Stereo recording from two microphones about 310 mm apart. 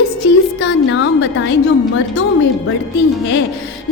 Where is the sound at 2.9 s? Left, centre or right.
Left.